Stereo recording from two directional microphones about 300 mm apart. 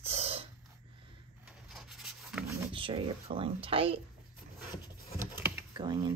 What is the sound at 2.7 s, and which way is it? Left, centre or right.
Speech, centre.